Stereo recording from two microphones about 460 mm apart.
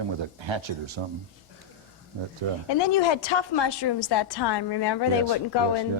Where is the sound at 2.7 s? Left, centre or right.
Left.